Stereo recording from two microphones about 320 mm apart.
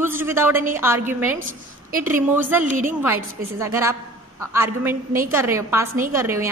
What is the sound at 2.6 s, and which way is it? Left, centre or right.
Speech, right.